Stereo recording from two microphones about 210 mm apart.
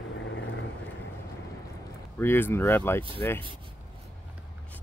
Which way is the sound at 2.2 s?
10° left (ahead or behind).